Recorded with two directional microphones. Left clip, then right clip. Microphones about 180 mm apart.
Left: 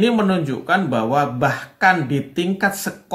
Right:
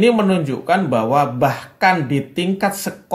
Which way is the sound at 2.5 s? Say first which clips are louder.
Even; 15° right (ahead or behind).